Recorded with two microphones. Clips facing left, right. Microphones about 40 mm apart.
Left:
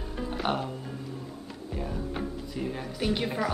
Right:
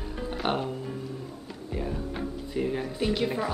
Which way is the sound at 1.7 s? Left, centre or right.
Centre.